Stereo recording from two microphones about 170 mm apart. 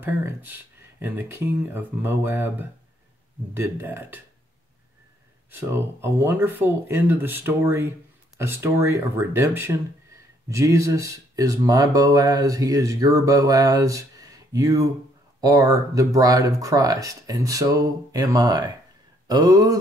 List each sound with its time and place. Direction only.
0.0 s speech: 10° right (ahead or behind)
5.5 s speech: 15° right (ahead or behind)